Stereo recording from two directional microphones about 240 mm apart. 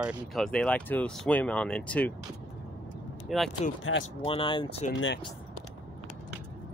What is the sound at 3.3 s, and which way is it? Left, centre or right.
Speech, centre.